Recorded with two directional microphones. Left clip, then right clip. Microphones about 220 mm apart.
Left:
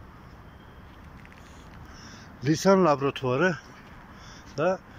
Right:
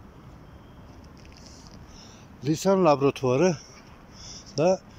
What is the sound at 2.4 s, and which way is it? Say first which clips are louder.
Speech: even; 15° right (ahead or behind).